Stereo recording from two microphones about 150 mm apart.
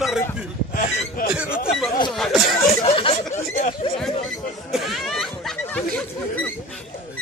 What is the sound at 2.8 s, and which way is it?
Chatter, 40° left (ahead or behind).